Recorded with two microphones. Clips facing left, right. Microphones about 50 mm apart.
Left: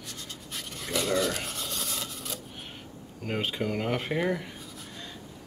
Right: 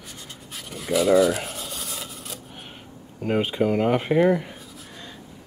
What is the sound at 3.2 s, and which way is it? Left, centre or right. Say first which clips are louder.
Speech: right 8 dB; centre.